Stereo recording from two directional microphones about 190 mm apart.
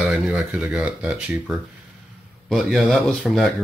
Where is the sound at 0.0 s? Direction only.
5° right (ahead or behind).